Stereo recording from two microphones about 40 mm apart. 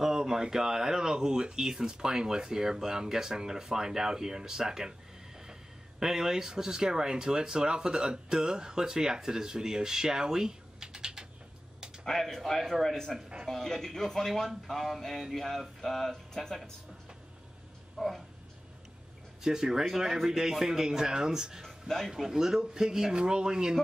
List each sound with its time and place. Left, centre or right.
0.0 s speech: centre
12.0 s speech: centre
17.9 s speech: centre
19.4 s speech: centre
21.6 s a sound: centre
22.1 s speech: centre